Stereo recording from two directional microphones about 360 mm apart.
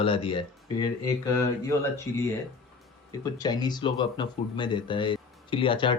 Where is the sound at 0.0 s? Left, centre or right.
Centre.